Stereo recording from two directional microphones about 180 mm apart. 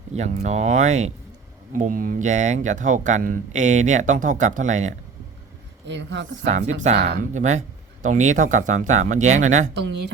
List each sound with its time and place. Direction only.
0.1 s speech: 40° right (ahead or behind)
5.9 s speech: 80° right
6.7 s speech: 40° right (ahead or behind)